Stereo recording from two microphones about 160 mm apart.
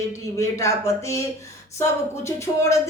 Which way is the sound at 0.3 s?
20° left (ahead or behind).